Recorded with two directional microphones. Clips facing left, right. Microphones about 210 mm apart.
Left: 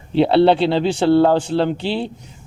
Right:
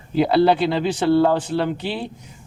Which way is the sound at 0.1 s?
30° left (ahead or behind).